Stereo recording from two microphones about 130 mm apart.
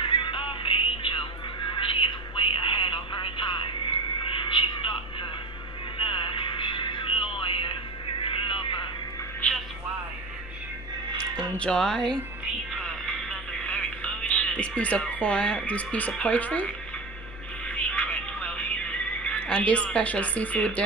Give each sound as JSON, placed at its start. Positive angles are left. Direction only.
{"t": 0.0, "sound": "music", "side_deg": 40}
{"t": 1.7, "sound": "a sound", "side_deg": 40}
{"t": 5.9, "sound": "music", "side_deg": 40}
{"t": 8.2, "sound": "a sound", "side_deg": 40}
{"t": 9.4, "sound": "music", "side_deg": 10}
{"t": 11.5, "sound": "speech", "side_deg": 5}
{"t": 12.8, "sound": "music", "side_deg": 5}